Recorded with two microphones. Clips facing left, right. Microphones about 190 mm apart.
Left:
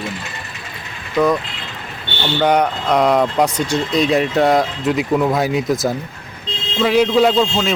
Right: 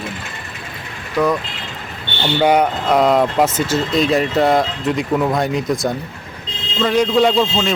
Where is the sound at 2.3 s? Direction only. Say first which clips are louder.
Right 1 dB; 10° right (ahead or behind).